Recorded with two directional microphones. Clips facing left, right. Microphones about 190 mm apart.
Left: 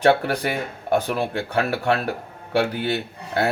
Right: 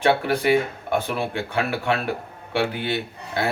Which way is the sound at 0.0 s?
40° left (ahead or behind).